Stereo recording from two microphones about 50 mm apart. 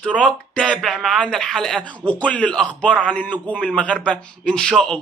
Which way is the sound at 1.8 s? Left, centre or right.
Left.